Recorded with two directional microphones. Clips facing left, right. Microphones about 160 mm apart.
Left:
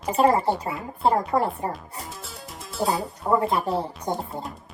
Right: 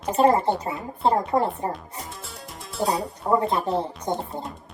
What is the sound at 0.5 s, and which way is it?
Speech, 35° right (ahead or behind).